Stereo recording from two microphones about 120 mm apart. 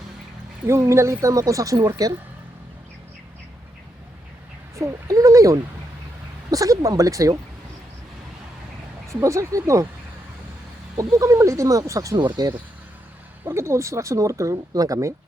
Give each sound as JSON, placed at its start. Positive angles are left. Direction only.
{"t": 0.7, "sound": "speech", "side_deg": -25}
{"t": 4.8, "sound": "speech", "side_deg": -30}
{"t": 9.0, "sound": "speech", "side_deg": -25}
{"t": 10.9, "sound": "speech", "side_deg": -30}
{"t": 13.4, "sound": "speech", "side_deg": -20}